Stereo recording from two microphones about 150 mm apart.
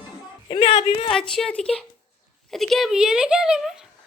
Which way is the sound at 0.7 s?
45° left (ahead or behind).